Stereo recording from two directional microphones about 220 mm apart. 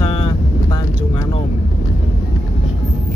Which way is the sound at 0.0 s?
20° left (ahead or behind).